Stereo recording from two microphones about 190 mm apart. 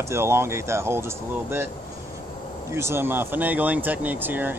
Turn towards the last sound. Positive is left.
turn(degrees=-10)  # may be behind; listen again after turning